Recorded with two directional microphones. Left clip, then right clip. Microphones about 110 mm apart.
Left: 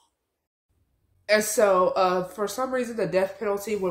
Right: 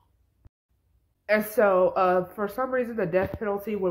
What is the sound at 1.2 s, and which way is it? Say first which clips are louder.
Speech: left 1 dB; 25° left (ahead or behind).